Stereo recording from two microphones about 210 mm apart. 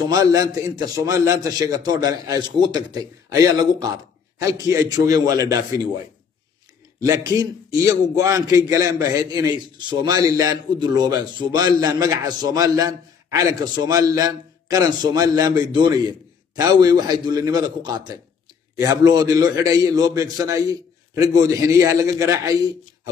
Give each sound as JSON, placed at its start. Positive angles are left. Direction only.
{"t": 0.1, "sound": "a man's voice", "side_deg": -15}
{"t": 7.0, "sound": "a man's voice", "side_deg": -15}